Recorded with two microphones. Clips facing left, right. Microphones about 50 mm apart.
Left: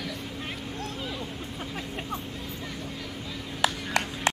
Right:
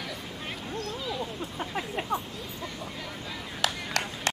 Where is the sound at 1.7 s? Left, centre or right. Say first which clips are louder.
Right 5 dB; centre.